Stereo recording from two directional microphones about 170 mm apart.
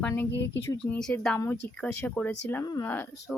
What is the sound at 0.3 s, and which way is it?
Speech, 90° left.